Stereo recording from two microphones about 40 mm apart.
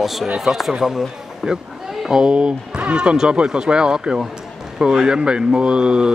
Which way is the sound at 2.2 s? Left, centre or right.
Right.